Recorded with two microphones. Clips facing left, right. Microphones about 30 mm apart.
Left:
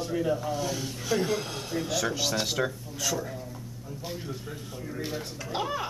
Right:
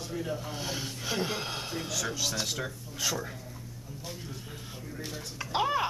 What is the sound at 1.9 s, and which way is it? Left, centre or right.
Speech, centre.